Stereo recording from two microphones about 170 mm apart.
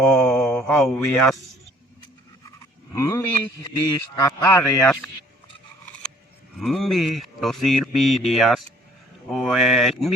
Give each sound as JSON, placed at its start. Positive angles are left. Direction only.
{"t": 0.0, "sound": "mantra", "side_deg": 5}
{"t": 2.9, "sound": "a man's voice", "side_deg": 15}
{"t": 6.6, "sound": "speech", "side_deg": 0}